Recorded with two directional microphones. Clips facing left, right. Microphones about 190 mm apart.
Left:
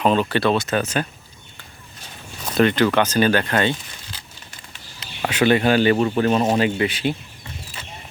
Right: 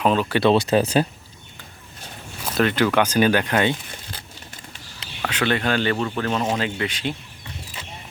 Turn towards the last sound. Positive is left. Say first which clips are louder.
# left 5 dB
turn(degrees=5)  # may be behind; listen again after turning